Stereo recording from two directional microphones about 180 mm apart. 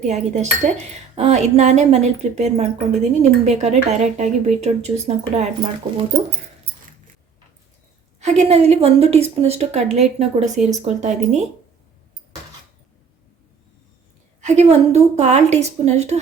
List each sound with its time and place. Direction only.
0.1 s speech: 35° right (ahead or behind)
5.8 s speech: 25° right (ahead or behind)
8.2 s speech: 40° right (ahead or behind)
14.4 s speech: 40° right (ahead or behind)